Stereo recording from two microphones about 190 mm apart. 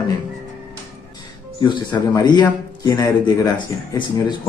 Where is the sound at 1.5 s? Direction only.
25° left (ahead or behind).